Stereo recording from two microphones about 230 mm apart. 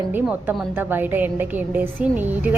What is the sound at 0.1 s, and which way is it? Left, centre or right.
A woman's voice, centre.